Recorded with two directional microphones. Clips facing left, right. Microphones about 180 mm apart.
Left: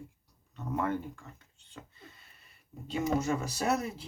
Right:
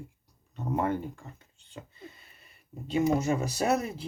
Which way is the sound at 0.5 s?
25° right (ahead or behind).